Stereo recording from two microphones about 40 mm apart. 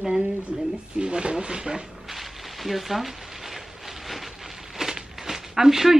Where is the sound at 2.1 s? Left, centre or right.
Centre.